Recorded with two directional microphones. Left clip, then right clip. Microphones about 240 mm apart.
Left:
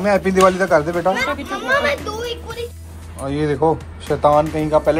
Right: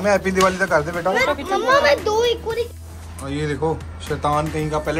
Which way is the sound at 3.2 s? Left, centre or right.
Centre.